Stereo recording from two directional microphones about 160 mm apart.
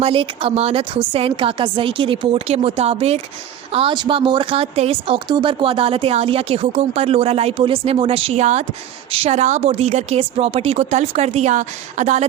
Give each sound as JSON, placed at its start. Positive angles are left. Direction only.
{"t": 0.0, "sound": "a woman's voice", "side_deg": -35}